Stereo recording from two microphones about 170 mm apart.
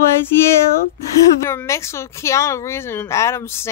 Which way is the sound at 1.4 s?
15° left (ahead or behind).